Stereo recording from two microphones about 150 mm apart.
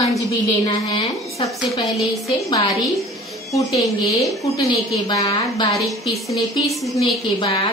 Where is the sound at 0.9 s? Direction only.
35° left (ahead or behind).